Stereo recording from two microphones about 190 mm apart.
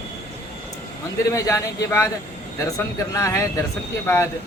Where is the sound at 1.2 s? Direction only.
15° left (ahead or behind).